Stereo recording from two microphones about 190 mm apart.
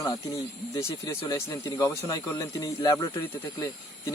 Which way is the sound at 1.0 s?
15° left (ahead or behind).